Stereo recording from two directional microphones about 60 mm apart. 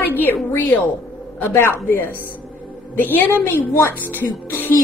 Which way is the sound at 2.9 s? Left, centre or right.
Left.